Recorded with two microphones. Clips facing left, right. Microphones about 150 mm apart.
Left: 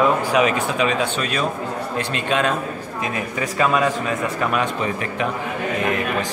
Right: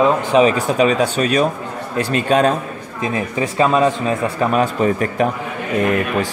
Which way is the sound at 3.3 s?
25° right (ahead or behind).